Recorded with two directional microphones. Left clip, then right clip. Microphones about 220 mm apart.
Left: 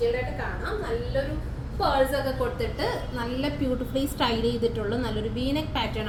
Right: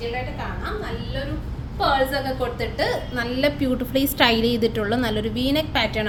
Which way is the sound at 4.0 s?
45° right (ahead or behind).